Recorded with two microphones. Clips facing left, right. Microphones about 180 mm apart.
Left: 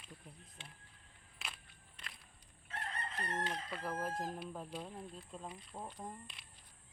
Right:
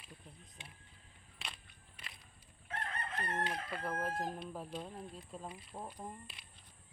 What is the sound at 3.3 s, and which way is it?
Chicken, 10° right (ahead or behind).